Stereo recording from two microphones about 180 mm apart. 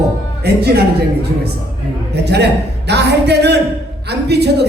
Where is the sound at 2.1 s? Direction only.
70° right (ahead or behind).